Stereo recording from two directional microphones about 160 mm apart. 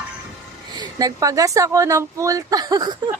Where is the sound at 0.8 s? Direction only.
25° right (ahead or behind).